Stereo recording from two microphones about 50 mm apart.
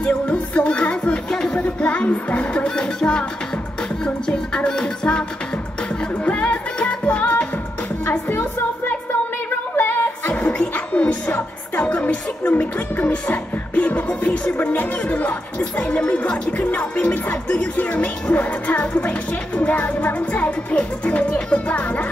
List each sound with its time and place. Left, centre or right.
0.0 s music: left
6.2 s music: left
8.3 s music: left
14.6 s speech: left
15.8 s music: left